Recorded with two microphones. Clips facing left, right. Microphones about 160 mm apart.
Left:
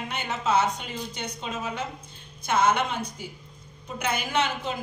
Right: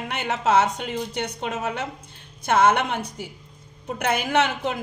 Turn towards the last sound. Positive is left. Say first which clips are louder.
# right 5 dB
turn(degrees=-65)  # may be behind; listen again after turning